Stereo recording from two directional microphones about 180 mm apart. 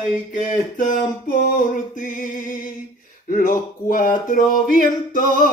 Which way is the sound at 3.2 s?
50° left (ahead or behind).